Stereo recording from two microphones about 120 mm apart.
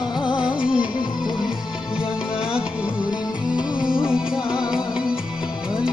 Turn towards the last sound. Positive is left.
turn(degrees=-5)  # may be behind; listen again after turning